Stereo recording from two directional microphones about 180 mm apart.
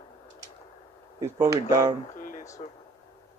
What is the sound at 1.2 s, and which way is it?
Speech, 20° right (ahead or behind).